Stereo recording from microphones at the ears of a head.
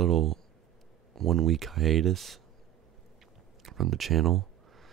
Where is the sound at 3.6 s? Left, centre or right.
Right.